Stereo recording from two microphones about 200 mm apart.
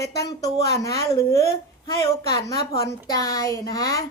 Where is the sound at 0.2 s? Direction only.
15° left (ahead or behind).